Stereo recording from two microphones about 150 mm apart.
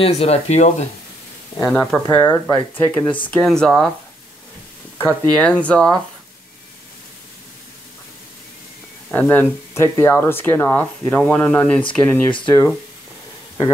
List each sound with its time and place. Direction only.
0.0 s speech: 45° left (ahead or behind)
1.7 s speech: 5° left (ahead or behind)
2.0 s speech: 25° left (ahead or behind)
2.4 s speech: 10° left (ahead or behind)
5.3 s speech: 10° left (ahead or behind)
9.1 s speech: 15° left (ahead or behind)
12.3 s speech: 35° left (ahead or behind)